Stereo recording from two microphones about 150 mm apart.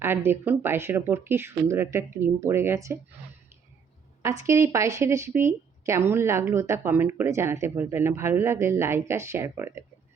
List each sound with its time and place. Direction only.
0.0 s speech: 15° right (ahead or behind)
4.2 s speech: 20° right (ahead or behind)